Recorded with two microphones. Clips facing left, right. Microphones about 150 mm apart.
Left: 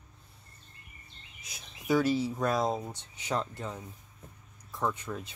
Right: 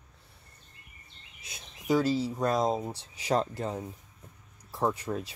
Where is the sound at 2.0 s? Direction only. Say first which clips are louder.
Even; 35° right (ahead or behind).